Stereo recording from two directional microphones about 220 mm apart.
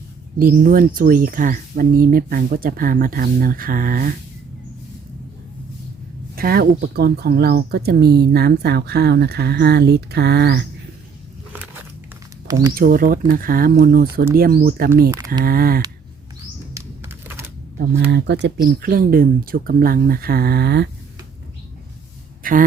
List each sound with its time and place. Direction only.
0.3 s speech: 40° right (ahead or behind)
6.3 s speech: 45° right (ahead or behind)
12.7 s speech: 40° right (ahead or behind)
16.7 s typing: 10° right (ahead or behind)
17.7 s speech: 50° right (ahead or behind)
22.4 s speech: 40° right (ahead or behind)